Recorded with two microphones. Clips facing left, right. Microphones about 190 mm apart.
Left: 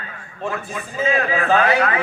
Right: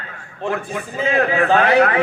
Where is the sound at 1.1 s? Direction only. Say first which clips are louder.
Right 4 dB; 60° right (ahead or behind).